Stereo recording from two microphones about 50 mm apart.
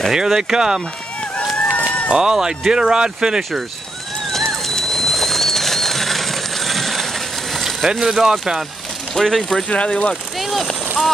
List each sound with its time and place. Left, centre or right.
0.1 s speech: centre
1.6 s a sound: left
2.0 s speech: centre
4.3 s pigeon: centre
7.8 s speech: centre
9.1 s speech: centre
9.7 s speech: left
10.4 s a sound: centre